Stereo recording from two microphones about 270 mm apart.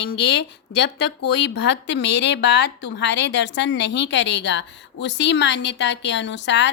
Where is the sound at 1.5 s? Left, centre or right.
Left.